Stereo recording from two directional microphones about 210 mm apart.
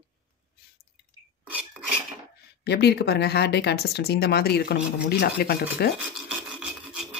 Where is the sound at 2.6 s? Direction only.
50° left (ahead or behind).